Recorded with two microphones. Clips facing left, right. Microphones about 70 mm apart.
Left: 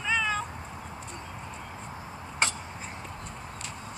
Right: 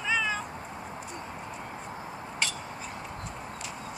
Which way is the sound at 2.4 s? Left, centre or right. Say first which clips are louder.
Left 4 dB; left.